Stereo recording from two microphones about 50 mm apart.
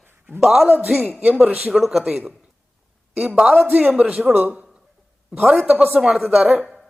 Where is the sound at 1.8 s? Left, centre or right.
Centre.